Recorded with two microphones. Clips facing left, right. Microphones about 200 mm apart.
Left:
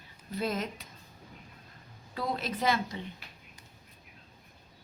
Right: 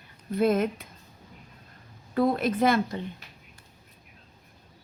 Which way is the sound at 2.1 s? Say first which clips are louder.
Right 10 dB; 55° right (ahead or behind).